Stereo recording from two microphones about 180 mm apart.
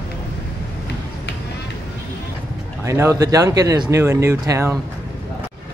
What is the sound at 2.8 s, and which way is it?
Speech, 15° right (ahead or behind).